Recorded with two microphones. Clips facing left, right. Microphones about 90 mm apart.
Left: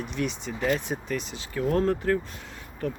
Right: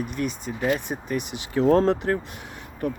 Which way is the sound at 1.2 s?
60° right (ahead or behind).